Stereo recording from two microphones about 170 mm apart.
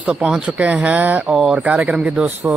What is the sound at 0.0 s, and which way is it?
Speech, 5° right (ahead or behind).